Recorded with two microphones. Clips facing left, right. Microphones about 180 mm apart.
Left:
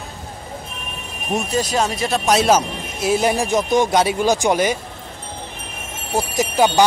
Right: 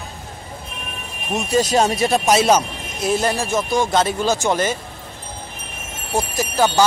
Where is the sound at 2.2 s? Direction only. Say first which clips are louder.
Left 2 dB; centre (ahead or behind).